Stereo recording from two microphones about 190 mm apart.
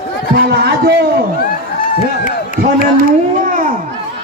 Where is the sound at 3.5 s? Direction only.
45° right (ahead or behind).